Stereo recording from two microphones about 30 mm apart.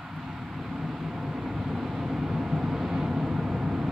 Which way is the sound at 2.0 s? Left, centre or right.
Centre.